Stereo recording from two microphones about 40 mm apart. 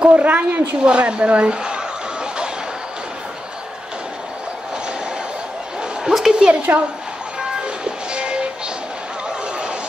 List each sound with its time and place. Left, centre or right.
0.0 s a woman's voice: right
0.8 s speech: right
6.0 s a woman's voice: centre
6.4 s a woman's voice: right
7.6 s train: right